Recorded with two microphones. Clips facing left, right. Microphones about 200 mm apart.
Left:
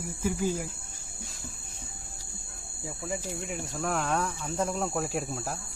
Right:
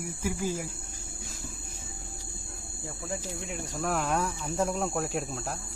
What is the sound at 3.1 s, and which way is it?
Speech, centre (ahead or behind).